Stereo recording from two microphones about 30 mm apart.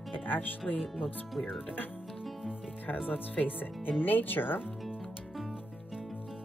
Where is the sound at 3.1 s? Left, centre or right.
Left.